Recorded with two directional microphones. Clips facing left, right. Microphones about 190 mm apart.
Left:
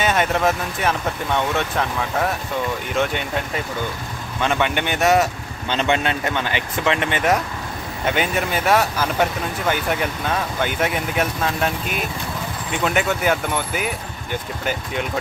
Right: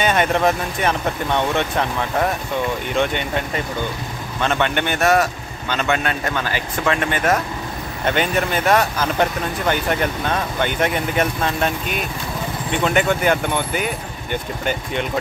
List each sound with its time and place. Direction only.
0.0 s speech: centre (ahead or behind); by 7.3 s 20° left (ahead or behind)
8.0 s speech: 5° left (ahead or behind)